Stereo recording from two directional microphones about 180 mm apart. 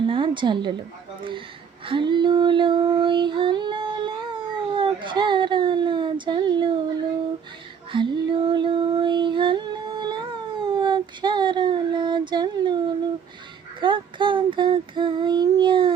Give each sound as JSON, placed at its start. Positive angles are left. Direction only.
{"t": 0.0, "sound": "a woman's voice", "side_deg": -25}
{"t": 1.9, "sound": "female singing", "side_deg": -25}
{"t": 7.9, "sound": "a sound", "side_deg": -25}
{"t": 13.8, "sound": "child singing", "side_deg": -25}